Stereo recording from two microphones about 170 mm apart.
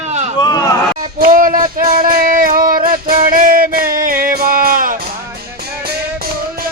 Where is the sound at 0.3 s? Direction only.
25° left (ahead or behind).